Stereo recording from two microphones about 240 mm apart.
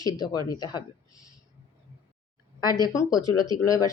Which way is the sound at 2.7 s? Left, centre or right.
Centre.